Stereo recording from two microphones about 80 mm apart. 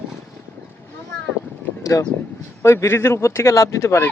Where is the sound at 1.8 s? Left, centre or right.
Left.